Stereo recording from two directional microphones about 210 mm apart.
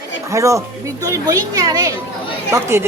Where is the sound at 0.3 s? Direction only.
15° right (ahead or behind).